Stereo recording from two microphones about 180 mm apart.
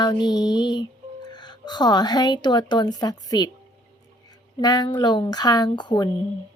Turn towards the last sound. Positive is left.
turn(degrees=25)  # may be behind; listen again after turning